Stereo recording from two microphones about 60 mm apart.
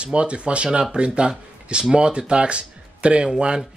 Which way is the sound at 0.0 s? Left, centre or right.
Centre.